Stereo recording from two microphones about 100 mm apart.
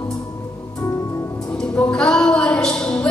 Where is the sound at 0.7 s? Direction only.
35° left (ahead or behind).